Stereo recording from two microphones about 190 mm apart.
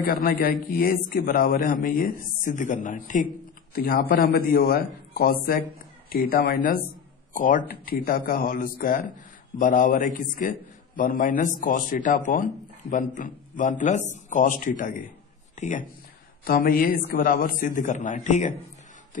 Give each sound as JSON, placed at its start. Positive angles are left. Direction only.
{"t": 0.0, "sound": "a man's voice", "side_deg": 50}
{"t": 15.5, "sound": "a sound", "side_deg": 40}
{"t": 16.4, "sound": "a man's voice", "side_deg": 50}